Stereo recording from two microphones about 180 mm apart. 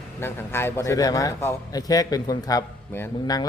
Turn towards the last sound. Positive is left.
turn(degrees=15)  # may be behind; listen again after turning